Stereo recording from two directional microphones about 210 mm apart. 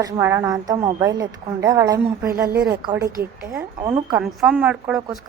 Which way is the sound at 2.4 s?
50° right (ahead or behind).